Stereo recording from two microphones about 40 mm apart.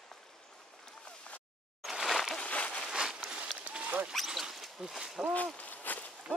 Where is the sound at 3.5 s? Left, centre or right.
Right.